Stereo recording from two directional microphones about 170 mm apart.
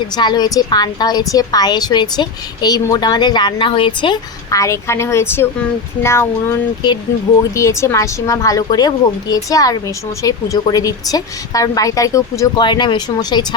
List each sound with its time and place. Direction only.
0.2 s a woman's voice: 25° left (ahead or behind)